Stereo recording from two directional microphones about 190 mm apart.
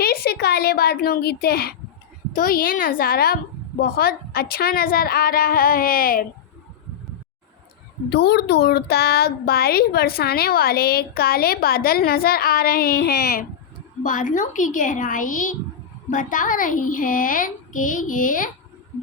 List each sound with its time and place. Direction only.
0.0 s speech: 55° left (ahead or behind)
8.1 s speech: 60° left (ahead or behind)
14.0 s speech: 45° left (ahead or behind)